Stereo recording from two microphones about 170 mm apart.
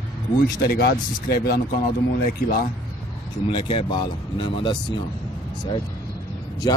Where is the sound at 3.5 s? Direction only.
30° left (ahead or behind).